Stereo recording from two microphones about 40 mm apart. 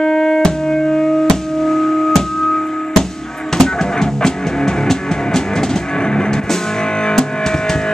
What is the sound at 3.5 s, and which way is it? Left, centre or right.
Music, centre.